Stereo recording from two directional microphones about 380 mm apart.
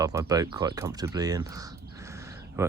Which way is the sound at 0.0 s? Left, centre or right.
Centre.